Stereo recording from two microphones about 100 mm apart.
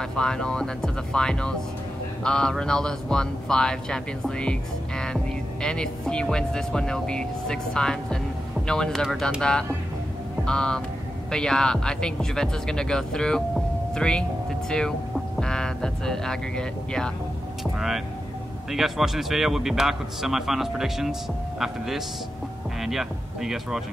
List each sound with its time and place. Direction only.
0.0 s a man's voice: 5° left (ahead or behind)